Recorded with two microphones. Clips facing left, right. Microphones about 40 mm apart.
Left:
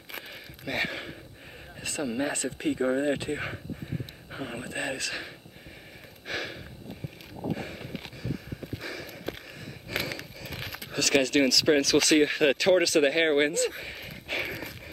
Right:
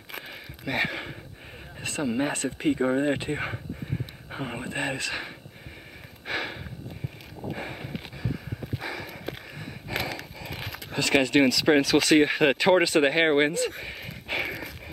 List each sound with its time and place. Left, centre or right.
0.7 s speech: centre
6.2 s snort: centre
7.5 s a sound: centre
10.9 s speech: centre